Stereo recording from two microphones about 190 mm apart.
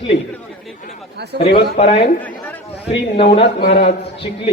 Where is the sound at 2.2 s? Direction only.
10° left (ahead or behind).